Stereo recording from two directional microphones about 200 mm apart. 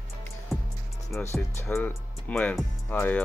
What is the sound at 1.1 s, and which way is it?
Speech, 15° left (ahead or behind).